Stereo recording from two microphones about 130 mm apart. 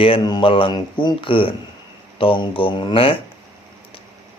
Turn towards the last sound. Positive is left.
turn(degrees=40)  # may be behind; listen again after turning